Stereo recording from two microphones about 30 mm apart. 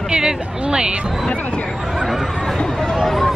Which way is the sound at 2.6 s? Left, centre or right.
Left.